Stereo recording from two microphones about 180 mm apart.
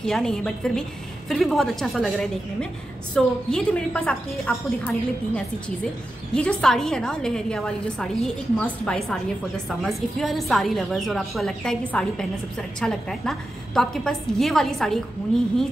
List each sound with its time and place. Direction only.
0.0 s a woman's voice: centre (ahead or behind)